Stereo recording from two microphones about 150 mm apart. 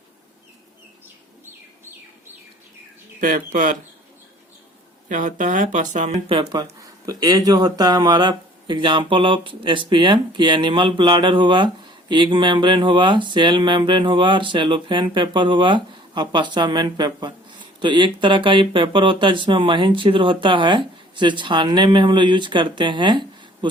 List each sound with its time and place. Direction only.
3.2 s speech: 65° right (ahead or behind)
5.0 s speech: 60° right (ahead or behind)
6.2 s speech: 30° right (ahead or behind)